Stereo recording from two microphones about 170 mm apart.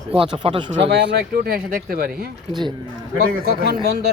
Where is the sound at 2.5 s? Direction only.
25° right (ahead or behind).